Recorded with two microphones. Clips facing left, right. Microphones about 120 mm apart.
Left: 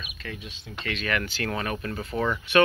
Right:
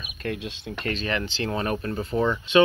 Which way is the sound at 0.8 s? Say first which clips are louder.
Right 1 dB; 30° right (ahead or behind).